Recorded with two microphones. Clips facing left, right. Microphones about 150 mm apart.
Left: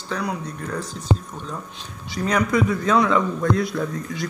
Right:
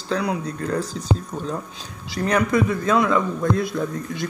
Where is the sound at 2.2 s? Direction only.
55° right (ahead or behind).